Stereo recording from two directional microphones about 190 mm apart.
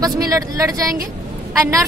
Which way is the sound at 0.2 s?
15° right (ahead or behind).